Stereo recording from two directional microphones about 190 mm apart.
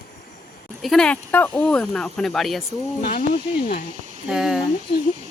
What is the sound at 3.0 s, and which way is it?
Speech, 55° left (ahead or behind).